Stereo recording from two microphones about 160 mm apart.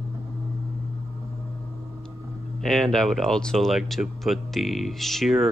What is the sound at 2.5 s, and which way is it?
Speech, centre (ahead or behind).